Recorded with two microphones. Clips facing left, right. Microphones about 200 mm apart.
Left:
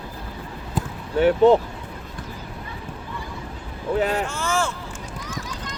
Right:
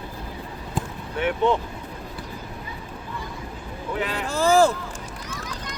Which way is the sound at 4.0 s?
40° left (ahead or behind).